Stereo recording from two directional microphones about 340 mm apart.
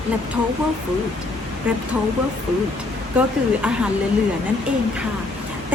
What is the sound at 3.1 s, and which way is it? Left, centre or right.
Speech, centre.